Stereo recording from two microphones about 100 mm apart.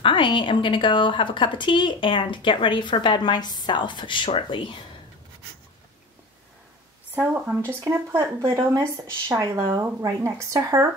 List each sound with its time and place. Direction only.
0.0 s speech: 55° left (ahead or behind)
7.2 s speech: 20° right (ahead or behind)